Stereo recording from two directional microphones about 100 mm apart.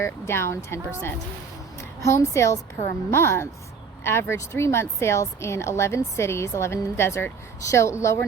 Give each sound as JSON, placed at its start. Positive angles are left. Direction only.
{"t": 0.0, "sound": "a woman's voice", "side_deg": 25}